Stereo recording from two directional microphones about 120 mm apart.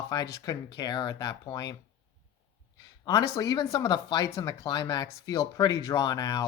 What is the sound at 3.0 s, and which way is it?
A woman's voice, 30° left (ahead or behind).